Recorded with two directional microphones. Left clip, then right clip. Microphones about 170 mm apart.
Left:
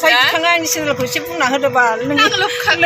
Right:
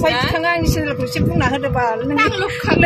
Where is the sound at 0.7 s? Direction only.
10° left (ahead or behind).